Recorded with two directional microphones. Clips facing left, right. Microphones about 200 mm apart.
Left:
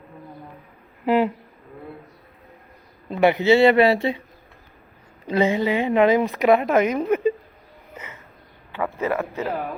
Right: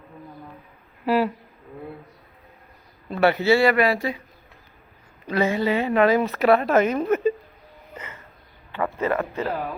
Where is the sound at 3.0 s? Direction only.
15° left (ahead or behind).